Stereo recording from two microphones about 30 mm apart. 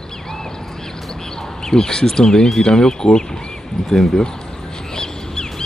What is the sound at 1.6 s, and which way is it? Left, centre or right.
Speech, left.